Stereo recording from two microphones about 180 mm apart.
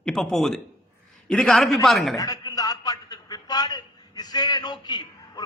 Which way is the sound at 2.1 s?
20° left (ahead or behind).